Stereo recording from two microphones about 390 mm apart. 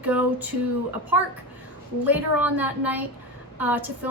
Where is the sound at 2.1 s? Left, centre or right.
Centre.